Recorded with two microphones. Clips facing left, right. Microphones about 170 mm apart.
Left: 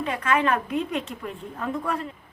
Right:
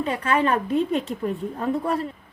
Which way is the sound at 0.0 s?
35° right (ahead or behind).